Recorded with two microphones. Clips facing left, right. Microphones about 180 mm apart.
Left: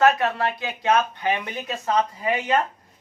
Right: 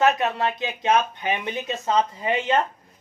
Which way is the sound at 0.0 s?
20° right (ahead or behind).